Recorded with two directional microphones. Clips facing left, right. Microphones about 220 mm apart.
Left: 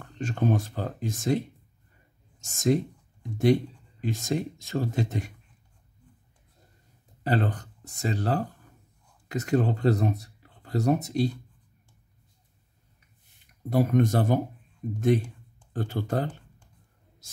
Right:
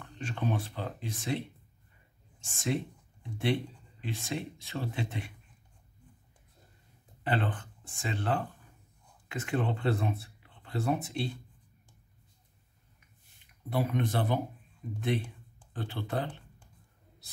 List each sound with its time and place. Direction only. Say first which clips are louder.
0.0 s speech: left 7 dB; 45° left (ahead or behind)
2.4 s speech: left 8 dB; 40° left (ahead or behind)
7.2 s speech: left 5 dB; 40° left (ahead or behind)
13.7 s speech: left 8 dB; 45° left (ahead or behind)